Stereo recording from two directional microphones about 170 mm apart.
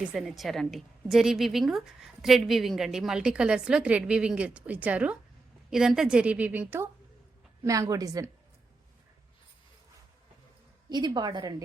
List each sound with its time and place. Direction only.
0.0 s a woman's voice: 5° right (ahead or behind); by 8.3 s 20° right (ahead or behind)
10.8 s a woman's voice: 25° right (ahead or behind)